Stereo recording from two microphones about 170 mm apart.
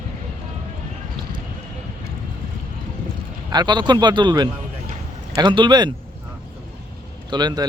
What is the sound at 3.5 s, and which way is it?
A man's voice, 25° right (ahead or behind).